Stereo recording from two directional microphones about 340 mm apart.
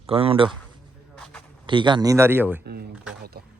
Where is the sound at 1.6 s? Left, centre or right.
Centre.